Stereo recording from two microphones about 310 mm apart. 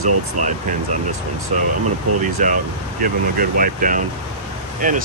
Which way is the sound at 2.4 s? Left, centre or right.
Right.